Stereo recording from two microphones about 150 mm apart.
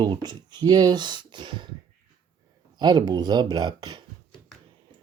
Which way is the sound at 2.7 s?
30° right (ahead or behind).